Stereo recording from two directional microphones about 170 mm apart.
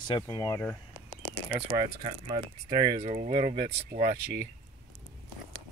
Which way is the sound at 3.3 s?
65° right (ahead or behind).